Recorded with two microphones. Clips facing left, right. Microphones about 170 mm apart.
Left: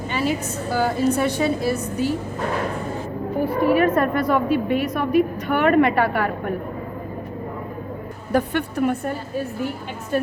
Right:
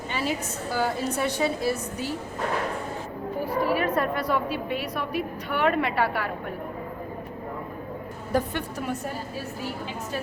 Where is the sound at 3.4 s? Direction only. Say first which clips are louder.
Left 7 dB; 55° left (ahead or behind).